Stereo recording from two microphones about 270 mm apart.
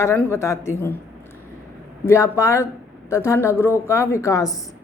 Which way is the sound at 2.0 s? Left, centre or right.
Centre.